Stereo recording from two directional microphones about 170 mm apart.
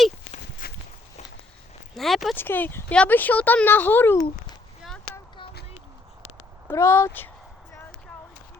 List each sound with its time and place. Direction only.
0.6 s walk: 60° left (ahead or behind)
2.0 s speech: centre (ahead or behind)
2.3 s speech: 10° left (ahead or behind)
6.2 s a sound: 15° left (ahead or behind)